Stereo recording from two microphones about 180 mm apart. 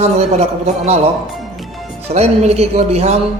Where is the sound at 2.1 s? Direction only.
35° right (ahead or behind).